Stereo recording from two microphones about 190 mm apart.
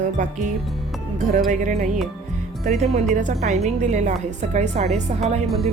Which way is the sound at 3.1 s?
40° right (ahead or behind).